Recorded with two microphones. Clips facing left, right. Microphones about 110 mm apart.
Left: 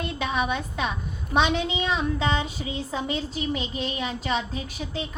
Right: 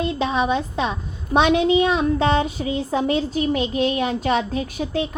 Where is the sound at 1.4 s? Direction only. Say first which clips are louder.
Right 7 dB; 50° right (ahead or behind).